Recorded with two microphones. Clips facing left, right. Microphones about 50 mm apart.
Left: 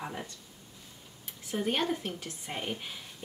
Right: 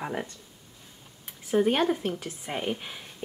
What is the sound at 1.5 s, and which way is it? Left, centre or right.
A woman's voice, centre.